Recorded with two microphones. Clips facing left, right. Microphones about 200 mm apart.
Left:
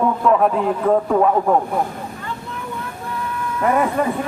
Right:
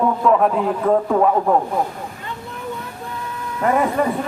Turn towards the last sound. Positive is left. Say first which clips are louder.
# even
turn(degrees=0)  # may be behind; listen again after turning